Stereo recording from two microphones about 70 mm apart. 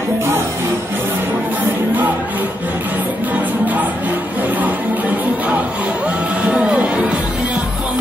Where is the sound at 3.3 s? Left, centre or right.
Right.